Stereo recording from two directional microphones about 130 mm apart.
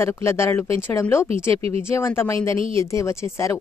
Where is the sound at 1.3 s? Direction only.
50° right (ahead or behind).